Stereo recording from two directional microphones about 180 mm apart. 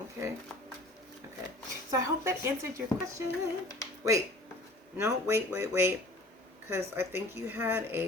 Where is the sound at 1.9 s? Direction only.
15° right (ahead or behind).